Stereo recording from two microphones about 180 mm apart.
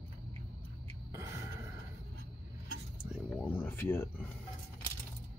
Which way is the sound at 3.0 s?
Centre (ahead or behind).